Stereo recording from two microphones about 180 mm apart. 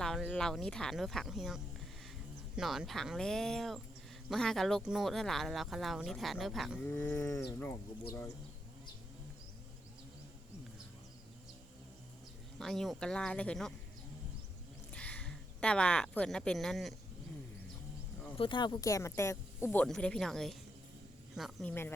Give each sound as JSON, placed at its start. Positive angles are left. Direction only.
{"t": 0.0, "sound": "speech", "side_deg": 0}
{"t": 6.8, "sound": "speech", "side_deg": 15}
{"t": 12.5, "sound": "speech", "side_deg": 0}
{"t": 14.9, "sound": "speech", "side_deg": 5}
{"t": 18.3, "sound": "speech", "side_deg": 25}